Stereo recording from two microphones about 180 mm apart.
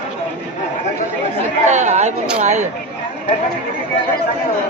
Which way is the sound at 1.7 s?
40° right (ahead or behind).